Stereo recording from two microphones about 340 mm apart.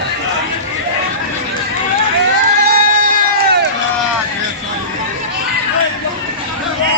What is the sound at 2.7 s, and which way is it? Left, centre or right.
Crowd, right.